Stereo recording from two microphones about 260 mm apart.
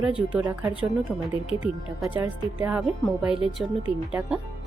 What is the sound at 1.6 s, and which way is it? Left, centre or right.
A woman's voice, centre.